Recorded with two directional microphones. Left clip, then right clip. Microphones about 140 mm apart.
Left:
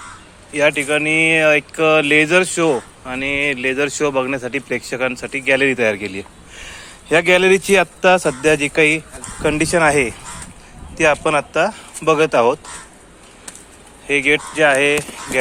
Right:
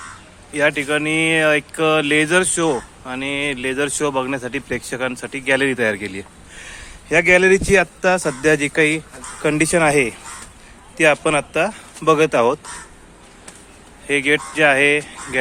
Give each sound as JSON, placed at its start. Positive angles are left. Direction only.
{"t": 0.5, "sound": "speech", "side_deg": -10}
{"t": 8.4, "sound": "speech", "side_deg": -20}
{"t": 9.5, "sound": "speech", "side_deg": -20}
{"t": 14.1, "sound": "speech", "side_deg": -20}